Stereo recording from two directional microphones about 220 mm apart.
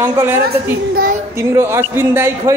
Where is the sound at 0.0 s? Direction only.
10° right (ahead or behind).